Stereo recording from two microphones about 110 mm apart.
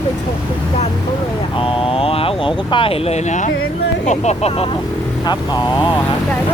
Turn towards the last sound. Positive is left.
turn(degrees=80)